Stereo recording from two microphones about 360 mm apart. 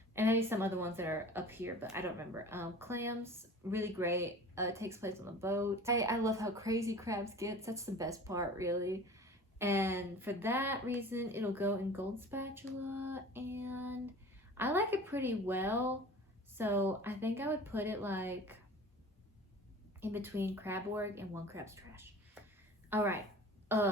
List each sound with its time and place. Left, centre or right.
0.1 s speech: centre
20.0 s a woman's voice: centre
23.6 s throat clearing: centre